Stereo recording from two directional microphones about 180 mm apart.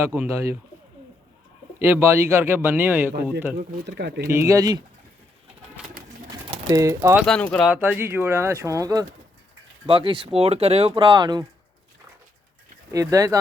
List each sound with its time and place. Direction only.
0.3 s speech: 15° right (ahead or behind)
1.8 s speech: 10° right (ahead or behind)
3.8 s speech: 65° right (ahead or behind)
4.3 s speech: 15° right (ahead or behind)
5.8 s pigeon: 5° right (ahead or behind)
6.7 s speech: 15° right (ahead or behind)
7.3 s speech: 5° left (ahead or behind)
7.7 s speech: 10° right (ahead or behind)
12.9 s speech: 20° right (ahead or behind)